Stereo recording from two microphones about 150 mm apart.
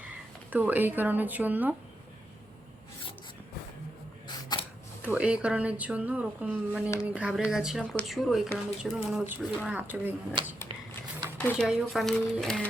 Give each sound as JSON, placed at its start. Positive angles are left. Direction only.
{"t": 0.5, "sound": "a woman's voice", "side_deg": -10}
{"t": 4.3, "sound": "a sound", "side_deg": 30}
{"t": 5.0, "sound": "a woman's voice", "side_deg": -10}
{"t": 10.4, "sound": "speech", "side_deg": -30}
{"t": 11.3, "sound": "speech", "side_deg": 10}
{"t": 11.6, "sound": "speech", "side_deg": 0}